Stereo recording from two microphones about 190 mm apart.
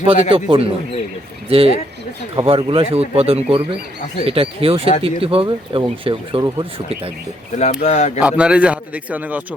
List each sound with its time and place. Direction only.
0.0 s speech: 30° right (ahead or behind)
7.5 s speech: 40° left (ahead or behind)
8.2 s a man's voice: 5° right (ahead or behind)